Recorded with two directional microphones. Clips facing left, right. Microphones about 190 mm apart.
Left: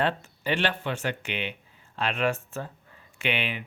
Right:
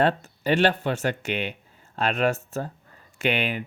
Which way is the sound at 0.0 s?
40° right (ahead or behind).